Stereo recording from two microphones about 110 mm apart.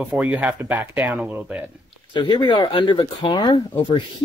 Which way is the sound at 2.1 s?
45° left (ahead or behind).